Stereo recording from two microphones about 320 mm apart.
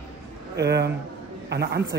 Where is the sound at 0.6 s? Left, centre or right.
Right.